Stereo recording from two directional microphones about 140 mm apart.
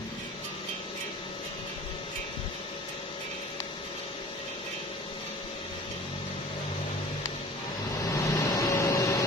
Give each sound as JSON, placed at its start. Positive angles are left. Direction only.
{"t": 8.0, "sound": "vehicle", "side_deg": 25}